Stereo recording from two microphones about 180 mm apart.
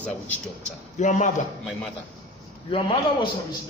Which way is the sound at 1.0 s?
45° left (ahead or behind).